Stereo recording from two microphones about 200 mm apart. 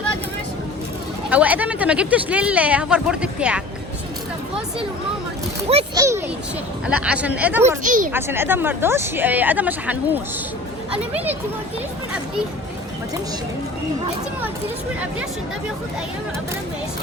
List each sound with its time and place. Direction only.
1.3 s speech: 10° right (ahead or behind)
5.9 s a sound: 15° right (ahead or behind)
6.8 s speech: 5° right (ahead or behind)
7.9 s a woman's voice: 40° right (ahead or behind)
8.1 s speech: 10° right (ahead or behind)